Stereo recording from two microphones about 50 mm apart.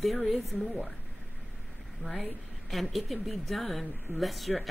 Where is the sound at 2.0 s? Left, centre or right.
Right.